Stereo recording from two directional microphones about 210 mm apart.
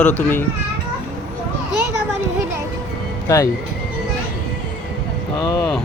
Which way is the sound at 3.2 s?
15° left (ahead or behind).